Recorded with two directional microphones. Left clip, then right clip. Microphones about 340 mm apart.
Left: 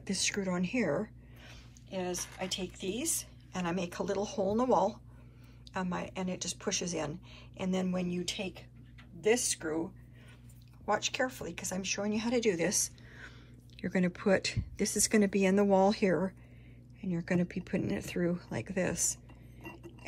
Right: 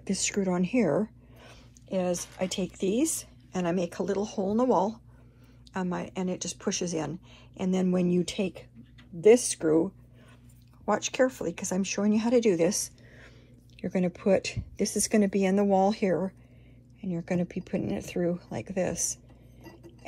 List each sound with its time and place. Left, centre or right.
0.0 s speech: centre
9.2 s speech: centre
10.9 s speech: centre
14.8 s a woman's voice: left
15.4 s speech: centre
17.3 s speech: right
18.8 s a woman's voice: left